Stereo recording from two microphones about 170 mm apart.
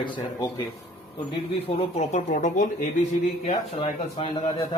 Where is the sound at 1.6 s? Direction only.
35° left (ahead or behind).